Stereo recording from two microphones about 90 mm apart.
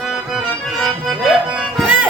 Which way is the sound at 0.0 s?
Centre (ahead or behind).